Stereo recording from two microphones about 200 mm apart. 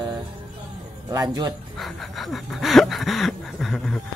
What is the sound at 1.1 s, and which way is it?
Speech, 20° right (ahead or behind).